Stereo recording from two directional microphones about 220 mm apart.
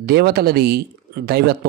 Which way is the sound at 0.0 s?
45° right (ahead or behind).